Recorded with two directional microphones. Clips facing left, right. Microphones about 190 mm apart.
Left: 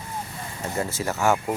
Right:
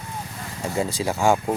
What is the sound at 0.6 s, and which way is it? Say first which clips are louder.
Speech: right 3 dB; 15° right (ahead or behind).